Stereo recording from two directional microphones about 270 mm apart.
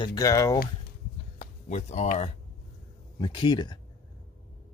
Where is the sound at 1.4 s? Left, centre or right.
Left.